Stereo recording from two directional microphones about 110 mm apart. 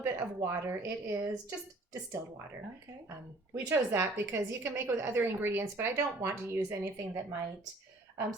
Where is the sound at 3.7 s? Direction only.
25° right (ahead or behind).